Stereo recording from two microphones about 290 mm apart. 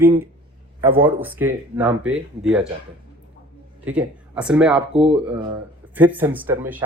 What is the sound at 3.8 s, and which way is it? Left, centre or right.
Speech, centre.